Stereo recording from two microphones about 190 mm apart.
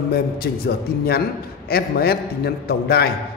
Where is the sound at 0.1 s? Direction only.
55° left (ahead or behind).